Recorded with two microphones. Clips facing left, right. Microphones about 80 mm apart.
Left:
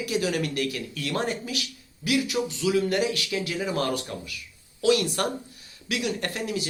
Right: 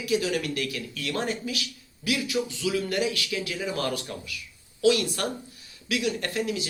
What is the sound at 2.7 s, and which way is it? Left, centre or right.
Speech, left.